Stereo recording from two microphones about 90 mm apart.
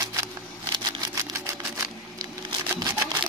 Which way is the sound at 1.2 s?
40° right (ahead or behind).